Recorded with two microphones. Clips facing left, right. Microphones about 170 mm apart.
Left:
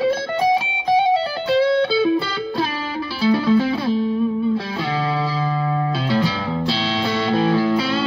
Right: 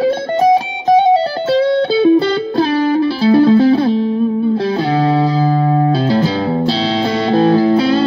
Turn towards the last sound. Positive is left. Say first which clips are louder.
# right 7 dB
turn(degrees=-35)  # may be behind; listen again after turning